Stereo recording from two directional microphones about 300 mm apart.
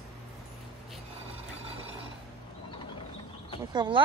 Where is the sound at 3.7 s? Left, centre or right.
Centre.